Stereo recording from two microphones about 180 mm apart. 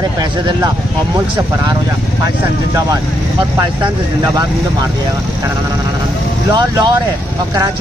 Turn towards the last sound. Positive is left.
turn(degrees=-25)  # may be behind; listen again after turning